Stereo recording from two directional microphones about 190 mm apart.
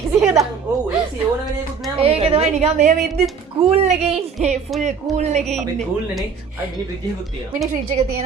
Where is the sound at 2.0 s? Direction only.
30° right (ahead or behind).